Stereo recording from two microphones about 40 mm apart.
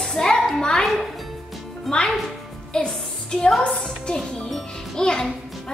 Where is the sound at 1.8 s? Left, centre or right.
Centre.